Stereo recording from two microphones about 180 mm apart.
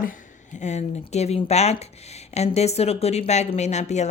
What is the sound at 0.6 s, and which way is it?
Speech, 40° left (ahead or behind).